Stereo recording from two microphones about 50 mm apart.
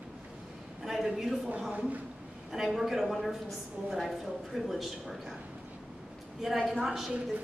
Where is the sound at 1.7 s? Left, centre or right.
Right.